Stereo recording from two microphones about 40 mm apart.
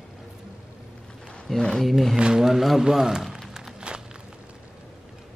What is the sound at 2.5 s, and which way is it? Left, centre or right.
Speech, centre.